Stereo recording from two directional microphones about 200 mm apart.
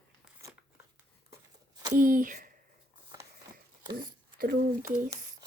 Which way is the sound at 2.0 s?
40° right (ahead or behind).